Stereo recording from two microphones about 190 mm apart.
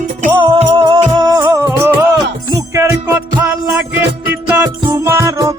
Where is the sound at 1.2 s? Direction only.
20° right (ahead or behind).